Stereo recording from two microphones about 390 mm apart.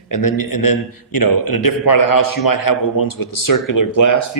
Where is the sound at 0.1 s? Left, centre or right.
Left.